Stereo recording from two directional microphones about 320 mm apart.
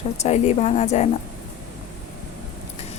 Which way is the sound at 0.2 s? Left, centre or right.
Left.